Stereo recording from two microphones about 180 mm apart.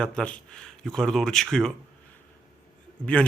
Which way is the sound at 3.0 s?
5° left (ahead or behind).